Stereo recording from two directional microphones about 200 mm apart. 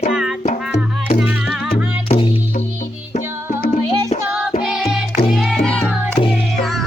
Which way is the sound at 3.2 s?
40° left (ahead or behind).